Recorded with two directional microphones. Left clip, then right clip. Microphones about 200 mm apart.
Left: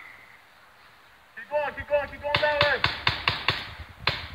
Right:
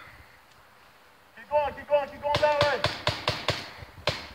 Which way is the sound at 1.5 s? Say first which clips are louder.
Right 1 dB; 10° left (ahead or behind).